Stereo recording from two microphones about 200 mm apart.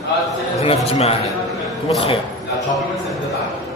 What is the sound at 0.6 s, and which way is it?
Speech, 30° left (ahead or behind).